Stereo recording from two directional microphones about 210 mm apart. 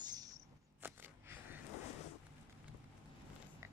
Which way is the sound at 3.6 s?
15° right (ahead or behind).